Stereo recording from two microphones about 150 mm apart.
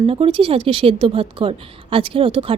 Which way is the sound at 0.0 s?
40° right (ahead or behind).